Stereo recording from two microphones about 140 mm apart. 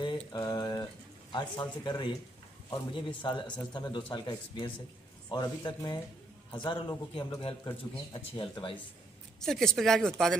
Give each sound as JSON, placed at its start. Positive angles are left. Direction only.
{"t": 0.0, "sound": "a sound", "side_deg": 30}
{"t": 1.3, "sound": "a man's voice", "side_deg": 35}
{"t": 3.2, "sound": "a man's voice", "side_deg": 35}
{"t": 9.4, "sound": "speech", "side_deg": 5}